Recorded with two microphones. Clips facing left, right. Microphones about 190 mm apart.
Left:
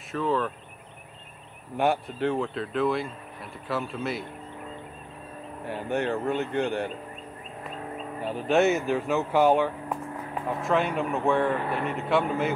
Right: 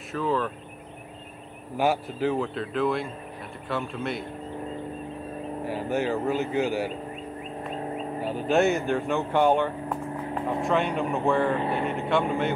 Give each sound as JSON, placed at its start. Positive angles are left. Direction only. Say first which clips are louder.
{"t": 0.1, "sound": "speech", "louder": "even", "side_deg": 0}
{"t": 1.8, "sound": "speech", "louder": "even", "side_deg": 0}
{"t": 5.7, "sound": "speech", "louder": "right 1 dB", "side_deg": 0}
{"t": 8.2, "sound": "speech", "louder": "even", "side_deg": 0}
{"t": 11.5, "sound": "speech", "louder": "right 2 dB", "side_deg": -25}
{"t": 11.9, "sound": "speech", "louder": "left 3 dB", "side_deg": 0}